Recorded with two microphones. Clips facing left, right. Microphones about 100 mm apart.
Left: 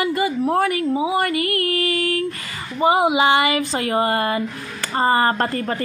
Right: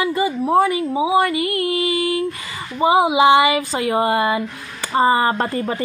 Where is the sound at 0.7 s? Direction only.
10° right (ahead or behind).